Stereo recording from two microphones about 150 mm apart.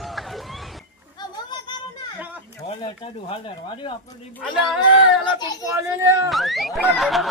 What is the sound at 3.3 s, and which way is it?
Speech, 35° left (ahead or behind).